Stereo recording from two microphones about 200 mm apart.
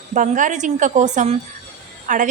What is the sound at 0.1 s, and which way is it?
Speech, 40° right (ahead or behind).